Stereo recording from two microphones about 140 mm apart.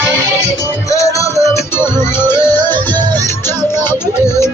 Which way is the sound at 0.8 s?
25° left (ahead or behind).